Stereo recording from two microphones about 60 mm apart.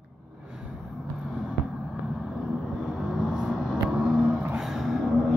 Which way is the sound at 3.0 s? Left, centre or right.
Centre.